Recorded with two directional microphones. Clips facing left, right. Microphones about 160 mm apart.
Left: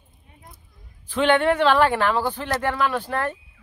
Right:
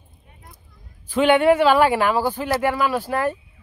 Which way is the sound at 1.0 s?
10° right (ahead or behind).